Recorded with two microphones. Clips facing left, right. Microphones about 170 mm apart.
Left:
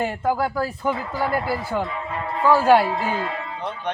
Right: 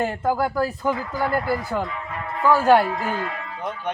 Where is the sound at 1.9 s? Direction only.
25° left (ahead or behind).